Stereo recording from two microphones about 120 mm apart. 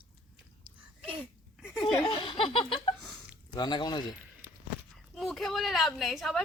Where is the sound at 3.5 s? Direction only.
35° left (ahead or behind).